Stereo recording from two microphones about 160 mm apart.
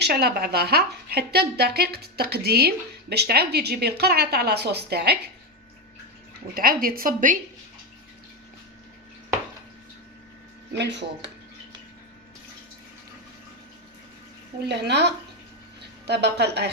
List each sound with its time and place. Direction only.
0.0 s a woman's voice: 80° right
6.5 s speech: 70° right (ahead or behind)
10.8 s a woman's voice: 90° right
14.7 s a woman's voice: 90° right